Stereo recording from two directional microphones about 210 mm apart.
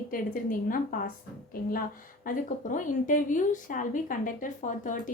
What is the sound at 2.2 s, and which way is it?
Speech, 40° left (ahead or behind).